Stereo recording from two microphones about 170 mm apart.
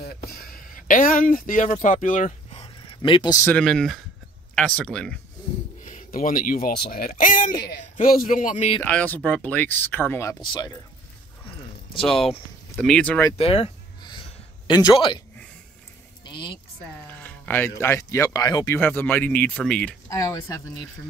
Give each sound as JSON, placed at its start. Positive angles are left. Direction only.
{"t": 0.0, "sound": "a sound", "side_deg": 65}
{"t": 1.7, "sound": "speech", "side_deg": 50}
{"t": 2.6, "sound": "a sound", "side_deg": 30}
{"t": 3.4, "sound": "speech", "side_deg": 5}
{"t": 5.9, "sound": "speech", "side_deg": 55}
{"t": 8.8, "sound": "speech", "side_deg": 10}
{"t": 10.4, "sound": "speech", "side_deg": 25}
{"t": 12.7, "sound": "speech", "side_deg": 5}
{"t": 13.4, "sound": "a sound", "side_deg": 35}
{"t": 14.7, "sound": "speech", "side_deg": 25}
{"t": 16.3, "sound": "speech", "side_deg": 30}
{"t": 17.1, "sound": "speech", "side_deg": 10}
{"t": 18.8, "sound": "speech", "side_deg": 10}
{"t": 20.1, "sound": "speech", "side_deg": 20}